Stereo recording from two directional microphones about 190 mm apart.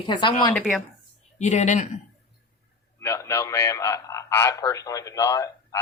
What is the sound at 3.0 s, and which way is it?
A man's voice, 15° left (ahead or behind).